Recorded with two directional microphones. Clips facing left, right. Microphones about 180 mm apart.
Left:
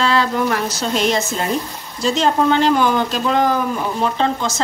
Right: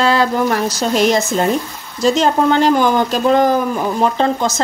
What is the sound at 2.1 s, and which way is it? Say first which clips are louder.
A woman's voice: right 2 dB; 45° right (ahead or behind).